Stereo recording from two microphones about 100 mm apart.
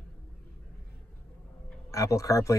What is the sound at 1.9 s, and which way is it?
Speech, 30° left (ahead or behind).